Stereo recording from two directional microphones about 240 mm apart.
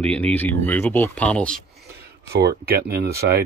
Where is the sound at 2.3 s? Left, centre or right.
Right.